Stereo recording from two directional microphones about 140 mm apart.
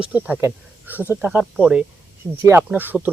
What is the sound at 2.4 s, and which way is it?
Speech, 20° right (ahead or behind).